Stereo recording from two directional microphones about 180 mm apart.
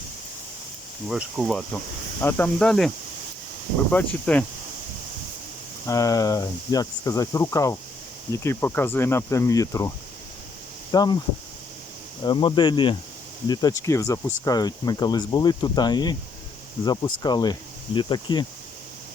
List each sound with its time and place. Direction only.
1.0 s speech: centre (ahead or behind)
3.9 s speech: 10° left (ahead or behind)
5.8 s speech: 20° left (ahead or behind)
10.9 s speech: 20° left (ahead or behind)
12.2 s speech: 25° left (ahead or behind)